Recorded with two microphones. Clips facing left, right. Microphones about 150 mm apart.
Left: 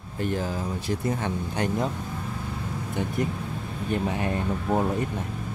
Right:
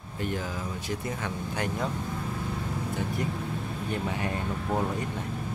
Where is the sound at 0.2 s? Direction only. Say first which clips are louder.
Left 4 dB; 35° left (ahead or behind).